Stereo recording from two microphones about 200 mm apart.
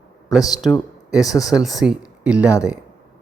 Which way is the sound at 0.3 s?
15° left (ahead or behind).